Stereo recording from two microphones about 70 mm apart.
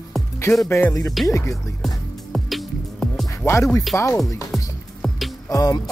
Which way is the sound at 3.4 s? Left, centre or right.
Left.